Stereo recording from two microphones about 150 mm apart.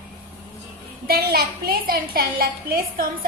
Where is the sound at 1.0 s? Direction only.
90° right.